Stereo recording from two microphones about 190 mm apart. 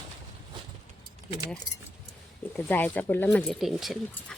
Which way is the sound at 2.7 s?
10° left (ahead or behind).